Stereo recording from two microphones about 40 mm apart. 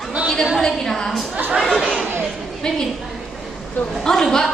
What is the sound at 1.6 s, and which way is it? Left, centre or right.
Chatter, centre.